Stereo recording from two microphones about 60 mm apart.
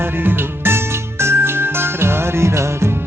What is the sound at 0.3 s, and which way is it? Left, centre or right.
Music, right.